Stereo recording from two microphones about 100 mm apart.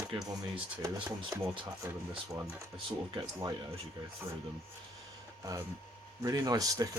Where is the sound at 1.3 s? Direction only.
35° right (ahead or behind).